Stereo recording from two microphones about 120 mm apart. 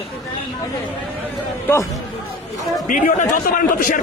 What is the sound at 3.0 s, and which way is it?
Speech, 90° left.